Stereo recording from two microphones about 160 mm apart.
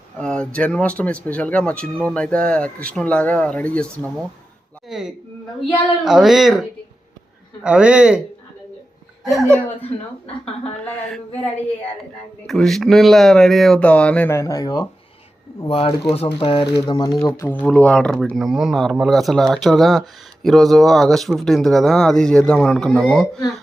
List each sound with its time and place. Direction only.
0.2 s speech: 5° left (ahead or behind)
4.9 s speech: centre (ahead or behind)
9.3 s speech: centre (ahead or behind)
12.5 s speech: centre (ahead or behind); by 14.8 s 25° left (ahead or behind)
15.7 s speech: 35° left (ahead or behind); by 23.4 s centre (ahead or behind)